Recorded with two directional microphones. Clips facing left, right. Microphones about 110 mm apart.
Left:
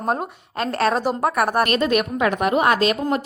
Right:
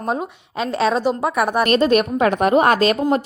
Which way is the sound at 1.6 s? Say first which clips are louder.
Right 4 dB; 30° right (ahead or behind).